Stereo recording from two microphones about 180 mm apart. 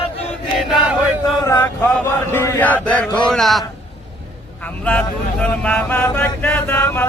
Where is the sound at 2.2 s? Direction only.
15° left (ahead or behind).